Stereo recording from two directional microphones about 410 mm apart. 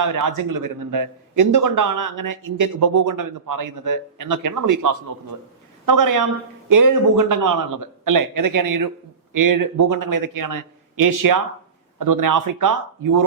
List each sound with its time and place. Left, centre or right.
0.3 s a man's voice: right